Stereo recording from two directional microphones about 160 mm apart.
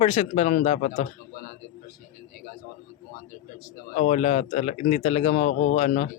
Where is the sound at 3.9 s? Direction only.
45° left (ahead or behind).